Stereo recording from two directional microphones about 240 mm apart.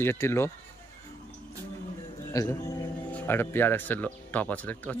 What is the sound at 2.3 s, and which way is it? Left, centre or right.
Speech, centre.